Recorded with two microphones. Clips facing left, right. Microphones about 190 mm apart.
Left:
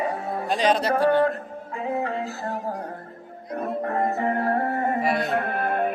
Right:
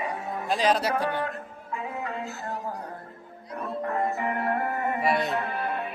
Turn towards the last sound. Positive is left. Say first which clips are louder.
# left 6 dB
turn(degrees=50)  # may be behind; listen again after turning